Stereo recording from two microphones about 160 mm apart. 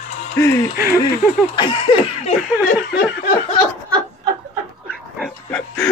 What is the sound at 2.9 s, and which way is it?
Laughter, 90° left.